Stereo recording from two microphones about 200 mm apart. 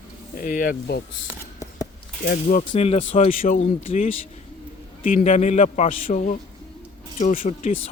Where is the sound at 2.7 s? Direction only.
30° left (ahead or behind).